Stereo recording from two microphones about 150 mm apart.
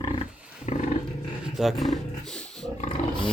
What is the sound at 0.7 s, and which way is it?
Roaring cats, 50° left (ahead or behind).